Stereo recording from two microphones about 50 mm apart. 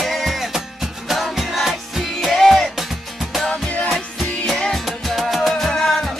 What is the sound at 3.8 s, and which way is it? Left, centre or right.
Music, centre.